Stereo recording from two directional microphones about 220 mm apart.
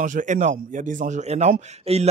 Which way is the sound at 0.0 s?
35° right (ahead or behind).